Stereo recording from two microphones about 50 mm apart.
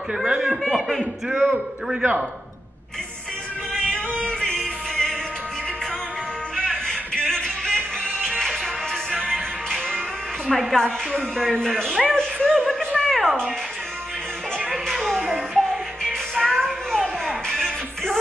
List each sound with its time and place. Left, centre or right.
0.1 s speech: centre
0.7 s speech: centre
3.7 s music: centre
6.5 s music: centre
14.9 s music: centre